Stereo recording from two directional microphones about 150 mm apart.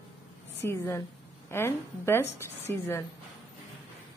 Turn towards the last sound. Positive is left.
turn(degrees=15)  # may be behind; listen again after turning